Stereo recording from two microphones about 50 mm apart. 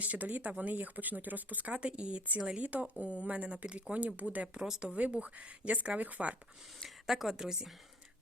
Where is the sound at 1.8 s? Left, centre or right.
Right.